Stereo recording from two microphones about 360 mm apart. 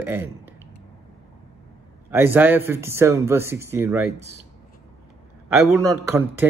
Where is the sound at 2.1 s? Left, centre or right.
Centre.